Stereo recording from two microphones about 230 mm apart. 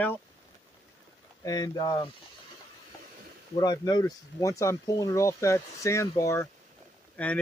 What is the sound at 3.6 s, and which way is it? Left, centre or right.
Speech, centre.